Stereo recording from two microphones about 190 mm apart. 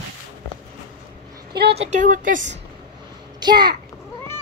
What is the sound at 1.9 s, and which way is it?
Speech, 45° right (ahead or behind).